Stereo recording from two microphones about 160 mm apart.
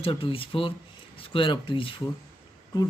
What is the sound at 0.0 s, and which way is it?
Speech, 35° left (ahead or behind).